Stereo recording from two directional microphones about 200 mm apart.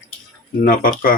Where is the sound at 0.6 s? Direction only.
45° left (ahead or behind).